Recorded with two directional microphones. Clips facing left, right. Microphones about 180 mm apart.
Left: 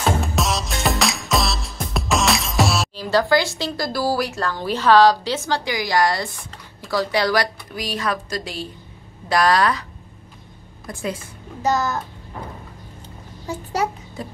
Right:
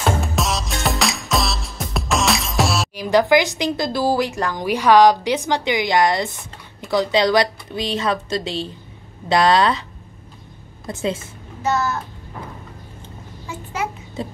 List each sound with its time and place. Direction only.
0.2 s music: centre (ahead or behind)
3.0 s a woman's voice: 20° right (ahead or behind)
10.9 s a woman's voice: 20° right (ahead or behind)
11.6 s a child's voice: 35° left (ahead or behind)
13.5 s a child's voice: 40° left (ahead or behind)
14.2 s a woman's voice: 25° right (ahead or behind)